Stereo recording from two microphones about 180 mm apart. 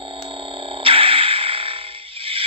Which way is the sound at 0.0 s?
30° right (ahead or behind).